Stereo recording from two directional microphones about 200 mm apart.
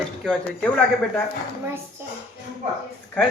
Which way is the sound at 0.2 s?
5° left (ahead or behind).